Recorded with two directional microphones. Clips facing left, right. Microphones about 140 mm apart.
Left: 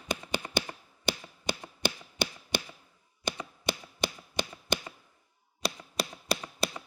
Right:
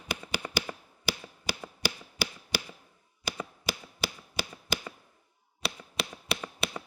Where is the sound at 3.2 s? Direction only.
5° right (ahead or behind).